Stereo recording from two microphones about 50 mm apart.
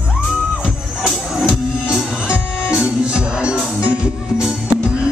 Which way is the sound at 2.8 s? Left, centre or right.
Centre.